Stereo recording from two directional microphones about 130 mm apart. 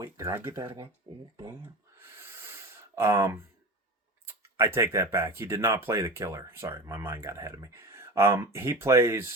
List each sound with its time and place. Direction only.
0.0 s speech: 20° right (ahead or behind)
1.1 s a sound: 40° right (ahead or behind)
2.0 s gasp: 20° right (ahead or behind)
4.3 s speech: 20° right (ahead or behind)